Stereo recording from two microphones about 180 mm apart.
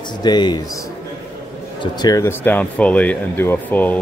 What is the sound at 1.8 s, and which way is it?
Speech, 20° left (ahead or behind).